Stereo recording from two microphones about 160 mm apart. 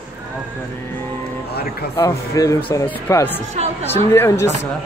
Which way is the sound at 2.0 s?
20° left (ahead or behind).